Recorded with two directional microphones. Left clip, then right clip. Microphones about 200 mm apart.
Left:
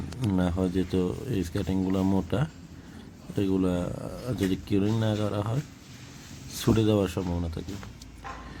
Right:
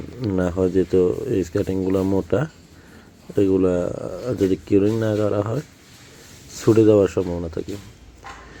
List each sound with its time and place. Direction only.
0.3 s speech: 10° right (ahead or behind)